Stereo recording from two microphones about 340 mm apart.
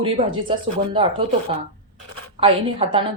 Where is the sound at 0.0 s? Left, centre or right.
Centre.